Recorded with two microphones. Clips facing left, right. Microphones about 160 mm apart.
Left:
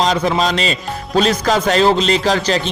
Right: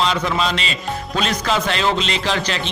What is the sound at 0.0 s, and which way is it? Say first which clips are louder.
Speech: left 4 dB; 40° left (ahead or behind).